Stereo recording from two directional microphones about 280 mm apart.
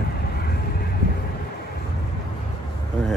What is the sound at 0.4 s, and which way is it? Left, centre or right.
Vehicle, left.